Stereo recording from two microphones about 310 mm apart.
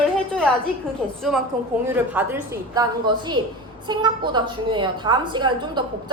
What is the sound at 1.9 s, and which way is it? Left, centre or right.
Speech, centre.